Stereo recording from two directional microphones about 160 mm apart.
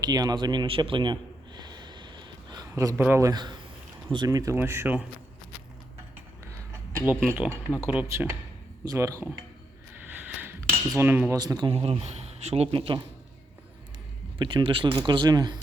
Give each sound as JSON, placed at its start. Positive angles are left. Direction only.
{"t": 0.0, "sound": "a sound", "side_deg": -25}
{"t": 3.0, "sound": "speech", "side_deg": -15}
{"t": 7.0, "sound": "speech", "side_deg": -10}
{"t": 10.2, "sound": "cutlery", "side_deg": -15}
{"t": 11.3, "sound": "speech", "side_deg": -25}
{"t": 11.7, "sound": "speech", "side_deg": -40}
{"t": 14.3, "sound": "speech", "side_deg": -30}